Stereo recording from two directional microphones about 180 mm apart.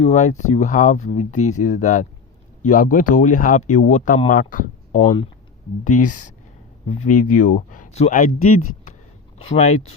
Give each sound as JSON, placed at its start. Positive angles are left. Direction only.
{"t": 0.0, "sound": "speech", "side_deg": 40}